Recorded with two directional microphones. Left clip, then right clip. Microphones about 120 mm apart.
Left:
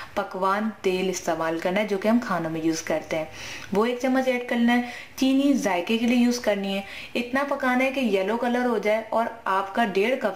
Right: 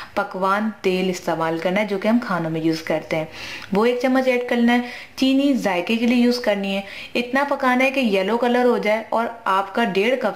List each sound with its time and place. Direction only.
0.1 s a woman's voice: 20° right (ahead or behind)